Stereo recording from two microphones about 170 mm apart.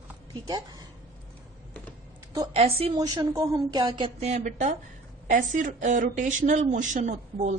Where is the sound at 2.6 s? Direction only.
35° right (ahead or behind).